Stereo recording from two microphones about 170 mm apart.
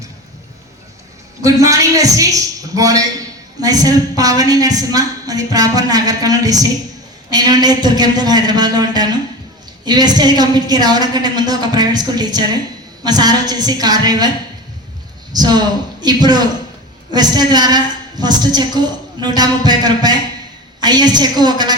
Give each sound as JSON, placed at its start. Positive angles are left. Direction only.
{"t": 1.4, "sound": "a man's voice", "side_deg": -20}
{"t": 15.3, "sound": "a woman's voice", "side_deg": -25}